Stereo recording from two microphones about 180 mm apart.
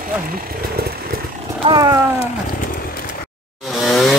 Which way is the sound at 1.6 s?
25° right (ahead or behind).